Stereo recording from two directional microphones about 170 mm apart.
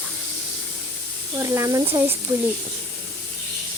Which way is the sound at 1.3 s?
15° right (ahead or behind).